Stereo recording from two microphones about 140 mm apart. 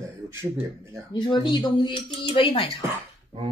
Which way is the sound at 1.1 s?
30° left (ahead or behind).